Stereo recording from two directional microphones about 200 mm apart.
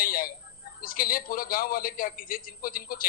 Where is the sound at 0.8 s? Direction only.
45° left (ahead or behind).